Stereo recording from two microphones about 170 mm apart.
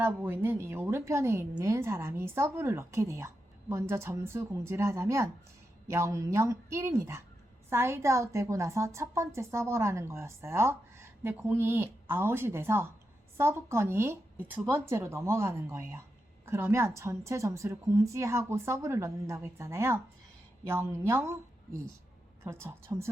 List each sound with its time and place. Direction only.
0.0 s a woman's voice: 15° right (ahead or behind)
22.4 s a woman's voice: 15° right (ahead or behind)